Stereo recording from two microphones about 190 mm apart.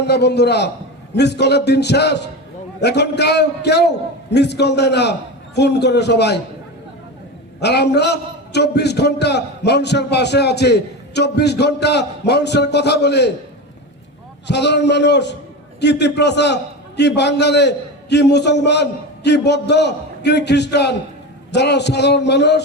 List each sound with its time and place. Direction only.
0.0 s a man's voice: 60° left (ahead or behind)
7.6 s a man's voice: 60° left (ahead or behind)
14.4 s a man's voice: 65° left (ahead or behind)